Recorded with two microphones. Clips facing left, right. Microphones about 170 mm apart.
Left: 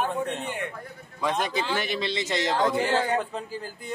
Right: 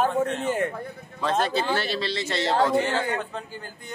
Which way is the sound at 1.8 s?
20° left (ahead or behind).